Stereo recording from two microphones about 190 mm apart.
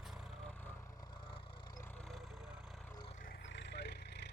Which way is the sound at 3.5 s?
65° left (ahead or behind).